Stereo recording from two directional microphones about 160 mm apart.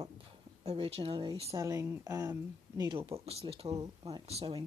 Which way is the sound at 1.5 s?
20° right (ahead or behind).